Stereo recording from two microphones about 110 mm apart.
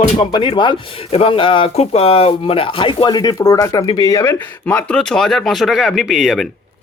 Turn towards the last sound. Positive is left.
turn(degrees=0)  # may be behind; listen again after turning